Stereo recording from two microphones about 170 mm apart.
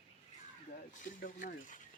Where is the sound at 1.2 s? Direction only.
50° left (ahead or behind).